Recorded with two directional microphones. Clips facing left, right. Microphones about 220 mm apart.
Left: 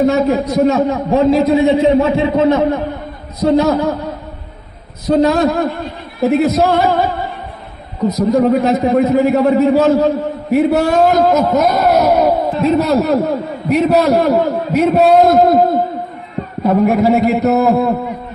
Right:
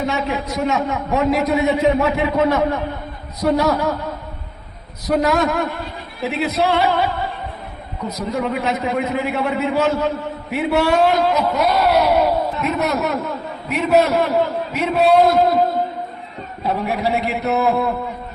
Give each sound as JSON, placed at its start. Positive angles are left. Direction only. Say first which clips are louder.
{"t": 0.0, "sound": "a man's voice", "louder": "left 9 dB", "side_deg": 40}
{"t": 5.0, "sound": "a man's voice", "louder": "left 6 dB", "side_deg": 30}
{"t": 6.2, "sound": "a man's voice", "louder": "left 8 dB", "side_deg": 45}
{"t": 12.5, "sound": "a man's voice", "louder": "left 8 dB", "side_deg": 30}